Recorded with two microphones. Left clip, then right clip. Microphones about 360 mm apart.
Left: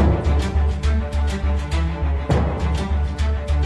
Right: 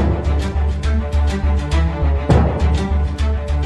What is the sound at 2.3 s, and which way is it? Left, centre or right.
Music, right.